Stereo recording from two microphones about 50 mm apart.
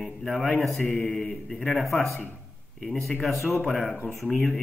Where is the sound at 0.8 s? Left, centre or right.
Centre.